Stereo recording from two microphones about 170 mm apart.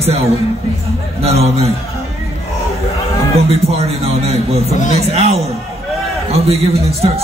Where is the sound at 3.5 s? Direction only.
35° right (ahead or behind).